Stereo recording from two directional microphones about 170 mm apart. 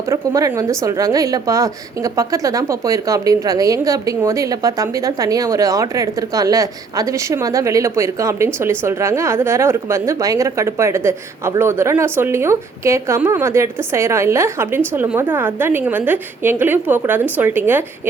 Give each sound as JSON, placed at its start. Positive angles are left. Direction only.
{"t": 0.1, "sound": "a woman's voice", "side_deg": -20}